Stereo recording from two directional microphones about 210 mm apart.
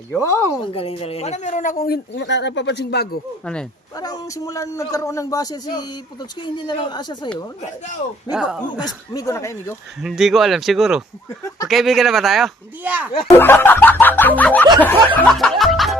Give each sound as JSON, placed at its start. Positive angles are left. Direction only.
{"t": 0.1, "sound": "a man's voice", "side_deg": 15}
{"t": 0.7, "sound": "speech", "side_deg": 25}
{"t": 3.4, "sound": "speech", "side_deg": 5}
{"t": 3.9, "sound": "a man's voice", "side_deg": 20}
{"t": 8.3, "sound": "speech", "side_deg": -5}
{"t": 8.8, "sound": "a man's voice", "side_deg": 15}
{"t": 10.0, "sound": "speech", "side_deg": 0}
{"t": 13.3, "sound": "a man's voice", "side_deg": 10}